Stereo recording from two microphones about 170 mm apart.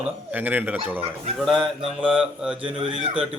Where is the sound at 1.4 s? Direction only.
Centre (ahead or behind).